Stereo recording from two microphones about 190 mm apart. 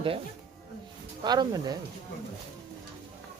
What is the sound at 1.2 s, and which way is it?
Speech, 20° right (ahead or behind).